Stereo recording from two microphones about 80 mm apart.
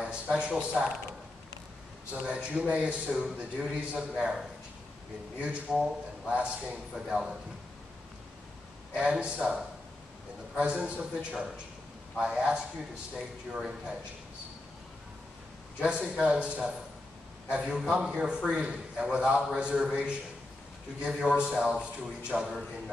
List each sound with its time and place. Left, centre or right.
0.0 s speech: centre
2.2 s a man's voice: centre
8.9 s a man's voice: centre
15.8 s a man's voice: centre